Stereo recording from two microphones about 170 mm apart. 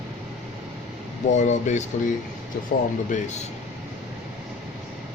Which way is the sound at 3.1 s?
45° left (ahead or behind).